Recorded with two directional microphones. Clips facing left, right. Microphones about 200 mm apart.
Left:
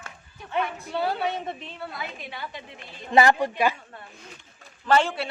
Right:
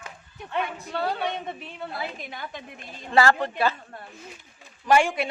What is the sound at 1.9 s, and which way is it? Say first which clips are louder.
Speech: right 2 dB; 35° right (ahead or behind).